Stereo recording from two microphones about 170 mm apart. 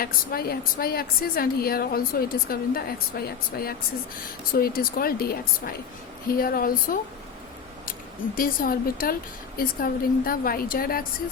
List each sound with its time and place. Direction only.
0.0 s a woman's voice: 60° left (ahead or behind)
8.4 s a woman's voice: 55° left (ahead or behind)